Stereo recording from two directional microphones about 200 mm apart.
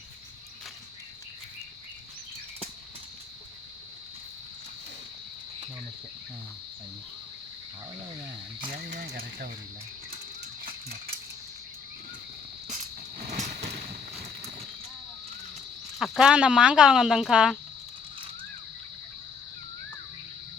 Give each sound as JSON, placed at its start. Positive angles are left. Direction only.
{"t": 8.7, "sound": "speech", "side_deg": -50}
{"t": 10.7, "sound": "a sound", "side_deg": -50}
{"t": 13.2, "sound": "vehicle", "side_deg": -35}
{"t": 16.0, "sound": "speech", "side_deg": 0}